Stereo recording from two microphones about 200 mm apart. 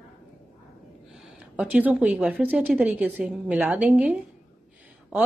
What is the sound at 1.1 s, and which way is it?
Speech, 5° right (ahead or behind).